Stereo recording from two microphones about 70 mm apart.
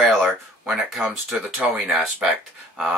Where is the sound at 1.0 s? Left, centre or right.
Centre.